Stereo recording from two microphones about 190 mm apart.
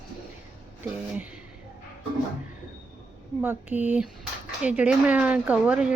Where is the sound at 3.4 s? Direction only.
10° right (ahead or behind).